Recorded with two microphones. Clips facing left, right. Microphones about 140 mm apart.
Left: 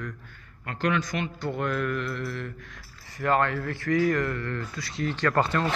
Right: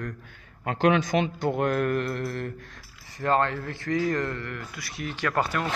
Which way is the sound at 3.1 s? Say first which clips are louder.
Even; 25° right (ahead or behind).